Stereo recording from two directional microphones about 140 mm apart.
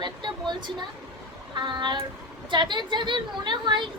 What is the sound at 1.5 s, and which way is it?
A woman's voice, 35° right (ahead or behind).